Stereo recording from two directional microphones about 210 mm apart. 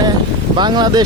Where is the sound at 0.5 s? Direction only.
20° right (ahead or behind).